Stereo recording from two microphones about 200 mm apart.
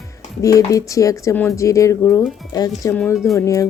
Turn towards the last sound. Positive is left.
turn(degrees=15)  # may be behind; listen again after turning